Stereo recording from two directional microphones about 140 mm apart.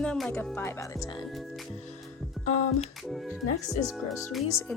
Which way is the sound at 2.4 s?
55° left (ahead or behind).